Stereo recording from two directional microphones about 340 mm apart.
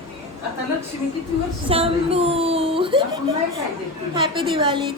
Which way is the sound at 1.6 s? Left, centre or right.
Centre.